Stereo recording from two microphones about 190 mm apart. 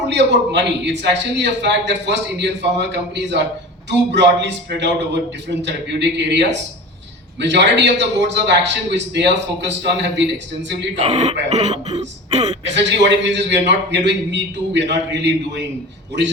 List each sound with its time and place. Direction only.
0.1 s a man's voice: 65° right (ahead or behind)
10.9 s speech: 35° right (ahead or behind)
12.7 s a man's voice: 65° right (ahead or behind)